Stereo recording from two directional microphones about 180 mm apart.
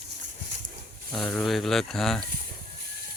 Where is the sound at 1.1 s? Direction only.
Centre (ahead or behind).